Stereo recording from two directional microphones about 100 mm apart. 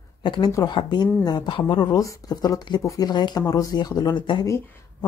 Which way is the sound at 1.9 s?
35° left (ahead or behind).